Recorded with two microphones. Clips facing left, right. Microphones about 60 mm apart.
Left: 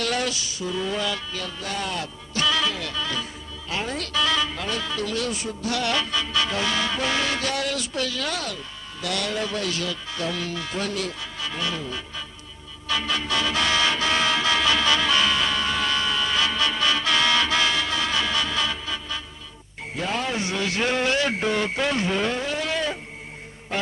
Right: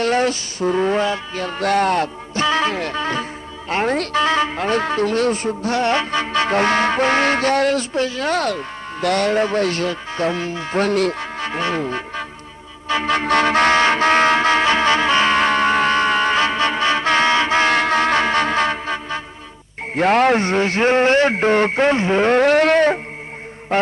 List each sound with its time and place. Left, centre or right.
0.0 s speech: right
1.5 s speech: right
2.3 s speech: right
8.4 s speech: right
10.8 s speech: right
12.9 s music: right
17.7 s music: right
19.9 s speech: right
22.3 s a sound: right